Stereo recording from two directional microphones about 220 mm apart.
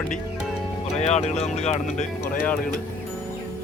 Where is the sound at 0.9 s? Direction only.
30° left (ahead or behind).